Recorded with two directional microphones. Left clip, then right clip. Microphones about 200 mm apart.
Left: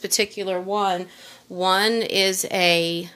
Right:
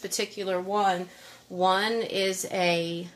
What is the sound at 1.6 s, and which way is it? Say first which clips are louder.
Speech: left 5 dB; 50° left (ahead or behind).